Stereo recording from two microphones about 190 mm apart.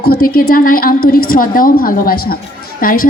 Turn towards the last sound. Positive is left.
turn(degrees=50)  # may be behind; listen again after turning